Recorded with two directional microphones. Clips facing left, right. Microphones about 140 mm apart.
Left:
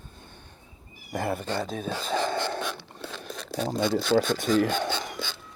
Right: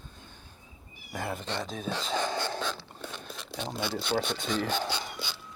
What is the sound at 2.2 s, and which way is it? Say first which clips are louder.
Wheeze: left 4 dB; 30° left (ahead or behind).